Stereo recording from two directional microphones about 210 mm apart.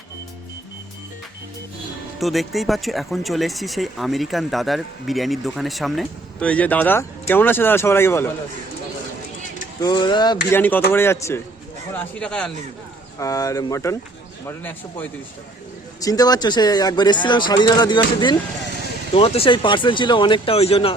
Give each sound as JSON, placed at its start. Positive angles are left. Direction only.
{"t": 2.1, "sound": "speech", "side_deg": 0}
{"t": 9.8, "sound": "speech", "side_deg": 20}
{"t": 10.6, "sound": "speech", "side_deg": 10}
{"t": 13.1, "sound": "speech", "side_deg": 15}